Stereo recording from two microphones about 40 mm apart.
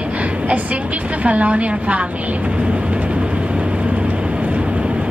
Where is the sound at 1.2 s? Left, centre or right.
Right.